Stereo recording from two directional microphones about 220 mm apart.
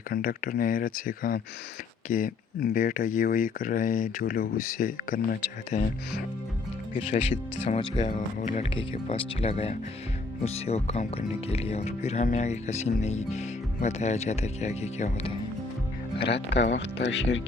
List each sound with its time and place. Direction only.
0.1 s speech: 40° left (ahead or behind)
16.2 s speech: 50° left (ahead or behind)